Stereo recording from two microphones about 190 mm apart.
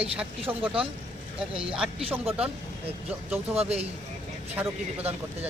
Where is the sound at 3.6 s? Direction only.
30° right (ahead or behind).